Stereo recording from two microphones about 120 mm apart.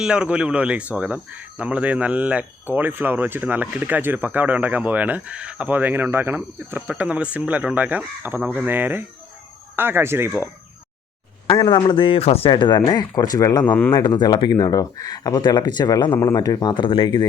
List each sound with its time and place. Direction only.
0.0 s speech: 10° right (ahead or behind)
11.4 s speech: 40° left (ahead or behind)